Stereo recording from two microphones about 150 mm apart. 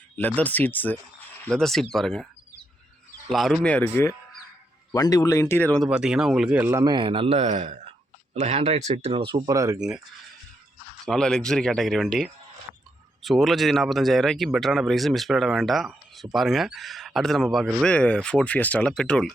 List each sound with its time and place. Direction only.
0.2 s speech: 10° left (ahead or behind)
3.3 s speech: centre (ahead or behind)
4.9 s speech: 25° left (ahead or behind)
5.9 s a man's voice: 5° right (ahead or behind); by 9.4 s 35° right (ahead or behind)
9.5 s speech: 20° right (ahead or behind)
11.0 s speech: 5° left (ahead or behind)